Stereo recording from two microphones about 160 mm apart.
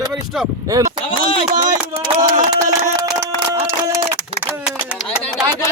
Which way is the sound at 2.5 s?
20° right (ahead or behind).